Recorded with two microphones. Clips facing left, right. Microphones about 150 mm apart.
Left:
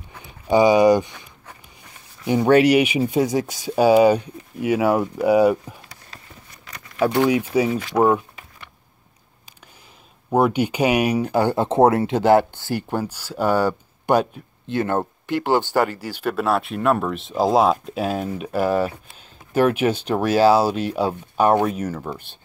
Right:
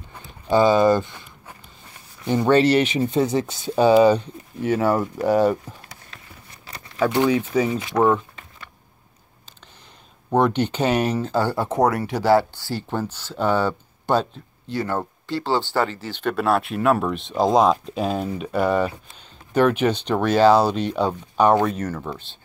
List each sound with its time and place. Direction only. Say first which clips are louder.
0.5 s speech: left 2 dB; 15° left (ahead or behind)
2.2 s speech: left 2 dB; 10° left (ahead or behind)
6.7 s a sound: right 1 dB; 30° right (ahead or behind)
7.2 s speech: left 1 dB; 10° left (ahead or behind)
7.9 s a sound: left 1 dB; 10° left (ahead or behind)
10.3 s speech: left 1 dB; 10° left (ahead or behind)